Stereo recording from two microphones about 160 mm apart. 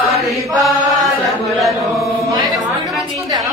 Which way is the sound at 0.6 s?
Centre (ahead or behind).